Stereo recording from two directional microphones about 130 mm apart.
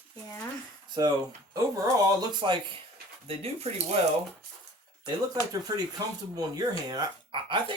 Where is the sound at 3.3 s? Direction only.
50° right (ahead or behind).